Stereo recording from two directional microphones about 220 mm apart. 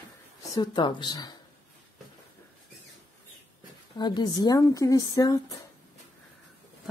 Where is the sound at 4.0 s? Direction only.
20° left (ahead or behind).